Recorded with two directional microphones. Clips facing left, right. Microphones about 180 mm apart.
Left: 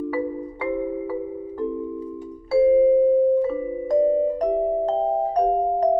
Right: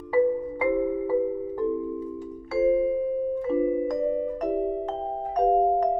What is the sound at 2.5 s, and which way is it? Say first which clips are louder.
Music: left 7 dB; 30° left (ahead or behind).